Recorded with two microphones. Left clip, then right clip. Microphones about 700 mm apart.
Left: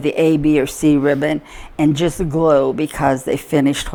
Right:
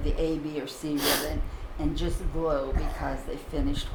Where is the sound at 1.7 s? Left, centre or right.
Left.